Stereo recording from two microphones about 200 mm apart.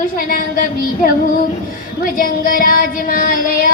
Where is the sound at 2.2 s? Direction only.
45° left (ahead or behind).